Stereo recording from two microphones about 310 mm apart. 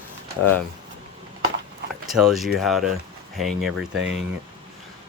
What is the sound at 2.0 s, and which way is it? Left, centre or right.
Speech, centre.